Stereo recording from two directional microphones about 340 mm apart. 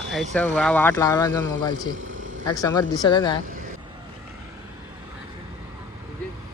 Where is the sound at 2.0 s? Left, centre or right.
Right.